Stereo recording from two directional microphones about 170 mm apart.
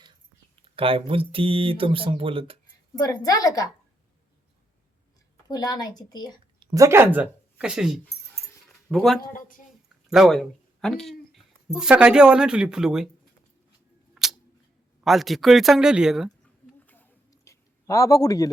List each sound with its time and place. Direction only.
0.6 s speech: 30° right (ahead or behind)
3.0 s speech: 20° left (ahead or behind)
5.5 s speech: 20° left (ahead or behind)
6.6 s speech: 25° right (ahead or behind); by 13.1 s 5° right (ahead or behind)
14.2 s camera: 5° right (ahead or behind)
15.0 s speech: centre (ahead or behind)
16.8 s a sound: 10° left (ahead or behind)